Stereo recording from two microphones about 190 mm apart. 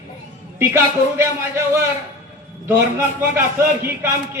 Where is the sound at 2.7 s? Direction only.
15° right (ahead or behind).